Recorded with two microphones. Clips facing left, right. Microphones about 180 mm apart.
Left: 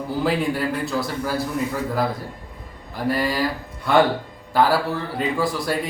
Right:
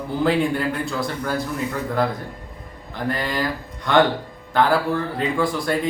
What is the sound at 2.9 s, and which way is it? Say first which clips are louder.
Speech: left 2 dB; 5° left (ahead or behind).